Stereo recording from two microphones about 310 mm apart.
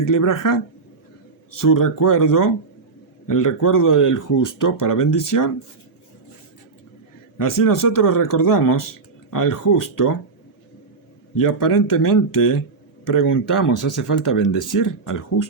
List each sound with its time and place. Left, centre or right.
0.0 s speech: left
7.3 s speech: left
11.3 s speech: left
13.5 s speech: left